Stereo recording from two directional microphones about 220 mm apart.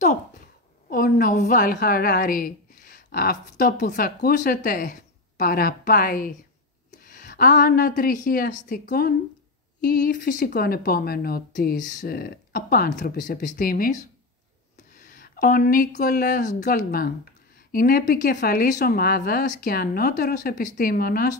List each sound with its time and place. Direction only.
0.8 s speech: 40° left (ahead or behind)
15.0 s speech: 40° left (ahead or behind)